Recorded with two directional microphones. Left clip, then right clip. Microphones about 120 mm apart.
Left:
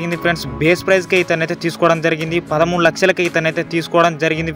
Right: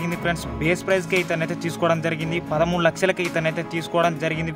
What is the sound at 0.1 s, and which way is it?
Speech, 25° left (ahead or behind).